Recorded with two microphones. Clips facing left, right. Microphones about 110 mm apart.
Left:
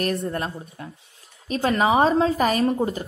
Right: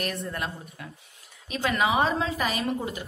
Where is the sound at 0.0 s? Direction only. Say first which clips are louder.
Left 6 dB; 40° left (ahead or behind).